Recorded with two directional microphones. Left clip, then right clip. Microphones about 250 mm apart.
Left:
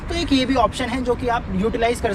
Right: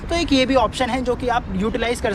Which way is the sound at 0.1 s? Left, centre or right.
Centre.